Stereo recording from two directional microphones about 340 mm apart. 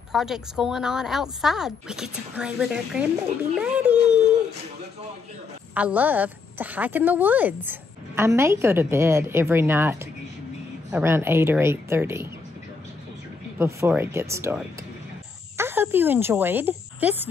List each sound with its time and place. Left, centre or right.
0.1 s a woman's voice: centre
5.8 s a woman's voice: centre
13.6 s a woman's voice: centre